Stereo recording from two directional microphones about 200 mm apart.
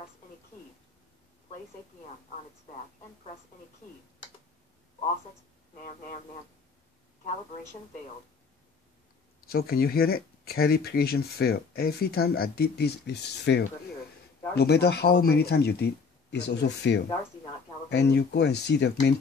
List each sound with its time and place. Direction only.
5.8 s speech: 40° left (ahead or behind)
9.5 s speech: 50° left (ahead or behind)